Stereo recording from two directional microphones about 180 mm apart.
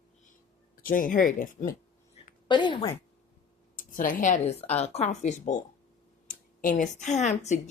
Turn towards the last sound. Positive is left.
turn(degrees=40)  # may be behind; listen again after turning